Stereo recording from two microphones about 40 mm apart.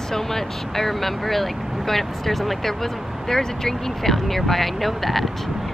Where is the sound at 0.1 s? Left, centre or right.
Centre.